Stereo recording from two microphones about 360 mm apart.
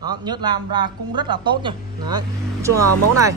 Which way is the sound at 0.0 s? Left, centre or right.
Centre.